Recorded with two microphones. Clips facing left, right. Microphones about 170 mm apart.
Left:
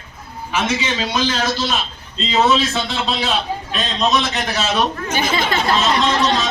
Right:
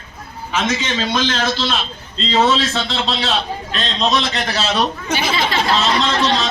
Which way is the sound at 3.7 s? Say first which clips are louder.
Even; 5° left (ahead or behind).